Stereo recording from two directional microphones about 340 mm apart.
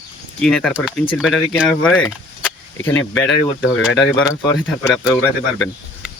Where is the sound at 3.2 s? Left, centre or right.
Left.